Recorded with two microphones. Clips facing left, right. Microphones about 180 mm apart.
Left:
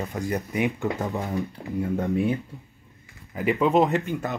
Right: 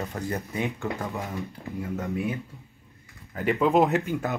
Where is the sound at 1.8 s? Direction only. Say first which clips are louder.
Left 5 dB; 30° left (ahead or behind).